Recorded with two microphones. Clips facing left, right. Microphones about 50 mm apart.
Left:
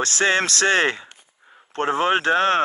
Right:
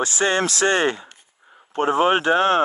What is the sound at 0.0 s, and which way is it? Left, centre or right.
Speech, left.